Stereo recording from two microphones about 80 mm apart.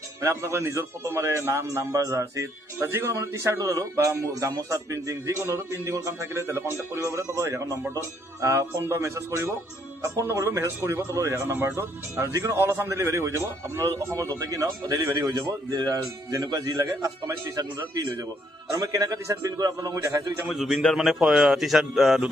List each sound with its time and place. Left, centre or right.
0.2 s a man's voice: right
20.5 s speech: centre